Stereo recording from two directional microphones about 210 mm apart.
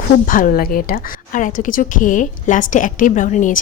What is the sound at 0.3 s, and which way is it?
A woman's voice, 40° left (ahead or behind).